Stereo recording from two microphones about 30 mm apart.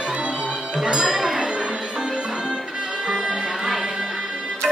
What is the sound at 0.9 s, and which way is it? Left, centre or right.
Music, right.